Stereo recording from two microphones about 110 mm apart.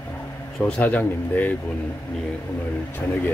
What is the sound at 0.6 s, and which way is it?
Speech, 10° left (ahead or behind).